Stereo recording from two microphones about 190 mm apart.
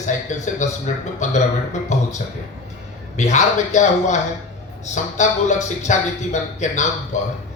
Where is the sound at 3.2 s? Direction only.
40° left (ahead or behind).